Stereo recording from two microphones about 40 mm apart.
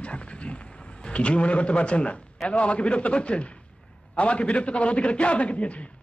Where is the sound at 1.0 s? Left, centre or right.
Left.